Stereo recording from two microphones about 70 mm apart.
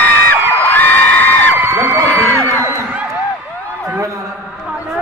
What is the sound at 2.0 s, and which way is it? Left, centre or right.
Music, left.